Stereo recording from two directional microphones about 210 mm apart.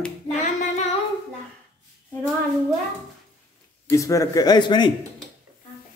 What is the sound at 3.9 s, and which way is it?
A man's voice, 15° left (ahead or behind).